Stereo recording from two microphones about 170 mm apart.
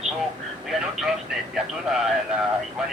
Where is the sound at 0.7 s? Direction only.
Centre (ahead or behind).